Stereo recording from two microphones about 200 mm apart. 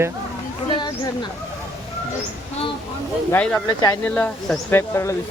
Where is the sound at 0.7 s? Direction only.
20° left (ahead or behind).